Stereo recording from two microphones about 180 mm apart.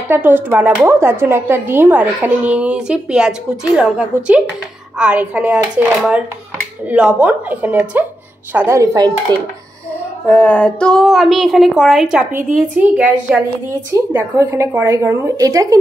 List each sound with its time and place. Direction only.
0.1 s speech: 10° right (ahead or behind)
10.2 s speech: 5° left (ahead or behind); by 15.8 s 20° right (ahead or behind)